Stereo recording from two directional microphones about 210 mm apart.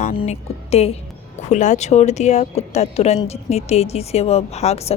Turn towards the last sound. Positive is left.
turn(degrees=30)  # may be behind; listen again after turning